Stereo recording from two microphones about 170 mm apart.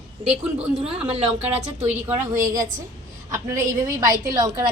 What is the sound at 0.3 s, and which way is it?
A woman's voice, 35° right (ahead or behind).